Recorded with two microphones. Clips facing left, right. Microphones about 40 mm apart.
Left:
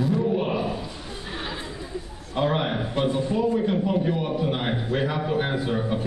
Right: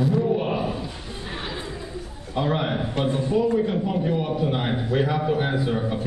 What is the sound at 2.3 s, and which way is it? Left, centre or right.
Speech, centre.